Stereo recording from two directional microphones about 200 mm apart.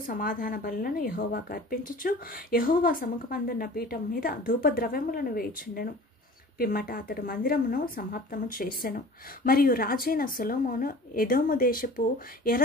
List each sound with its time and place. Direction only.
0.0 s speech: 45° left (ahead or behind)